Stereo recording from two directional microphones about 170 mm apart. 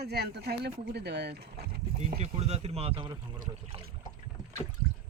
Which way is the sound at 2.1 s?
40° right (ahead or behind).